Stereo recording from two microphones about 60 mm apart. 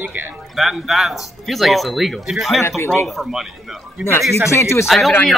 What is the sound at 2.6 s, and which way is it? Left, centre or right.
Speech, left.